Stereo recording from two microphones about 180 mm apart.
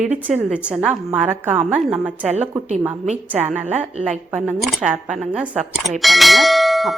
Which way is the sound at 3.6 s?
40° right (ahead or behind).